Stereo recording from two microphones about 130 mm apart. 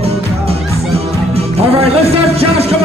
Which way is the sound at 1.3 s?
50° right (ahead or behind).